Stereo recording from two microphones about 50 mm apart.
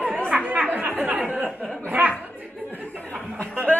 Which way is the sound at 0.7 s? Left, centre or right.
Right.